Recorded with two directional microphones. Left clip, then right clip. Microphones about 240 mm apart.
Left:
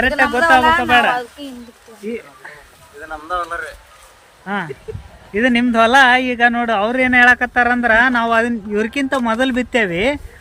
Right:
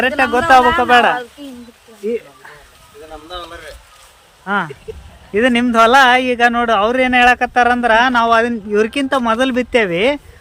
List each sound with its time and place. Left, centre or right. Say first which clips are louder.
0.2 s speech: right 3 dB; centre
1.4 s speech: left 1 dB; left
2.0 s a sound: right 6 dB; centre
4.4 s speech: right 4 dB; centre